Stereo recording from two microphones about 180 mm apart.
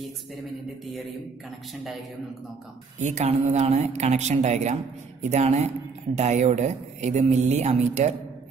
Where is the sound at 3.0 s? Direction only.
40° right (ahead or behind).